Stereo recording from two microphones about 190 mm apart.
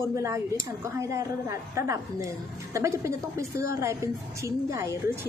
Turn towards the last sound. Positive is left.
turn(degrees=-15)  # may be behind; listen again after turning